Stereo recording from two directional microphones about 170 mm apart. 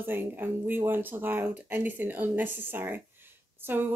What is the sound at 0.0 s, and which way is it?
Speech, 10° right (ahead or behind).